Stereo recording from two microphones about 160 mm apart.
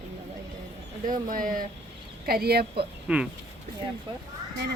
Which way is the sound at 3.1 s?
5° right (ahead or behind).